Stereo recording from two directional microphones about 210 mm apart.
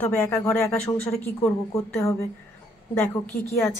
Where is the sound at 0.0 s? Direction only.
10° left (ahead or behind).